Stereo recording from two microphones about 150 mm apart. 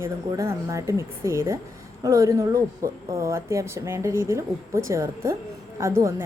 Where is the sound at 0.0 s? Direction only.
20° right (ahead or behind).